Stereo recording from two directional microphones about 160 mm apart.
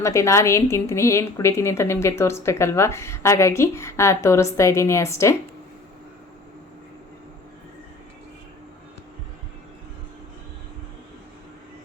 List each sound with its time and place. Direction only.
0.0 s a woman's voice: 20° left (ahead or behind)